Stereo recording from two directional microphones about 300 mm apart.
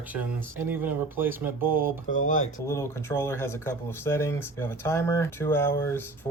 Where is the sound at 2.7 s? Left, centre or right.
Centre.